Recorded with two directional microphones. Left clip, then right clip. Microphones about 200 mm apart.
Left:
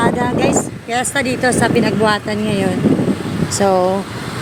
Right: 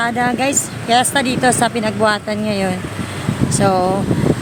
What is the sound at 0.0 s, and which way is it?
Speech, 10° right (ahead or behind).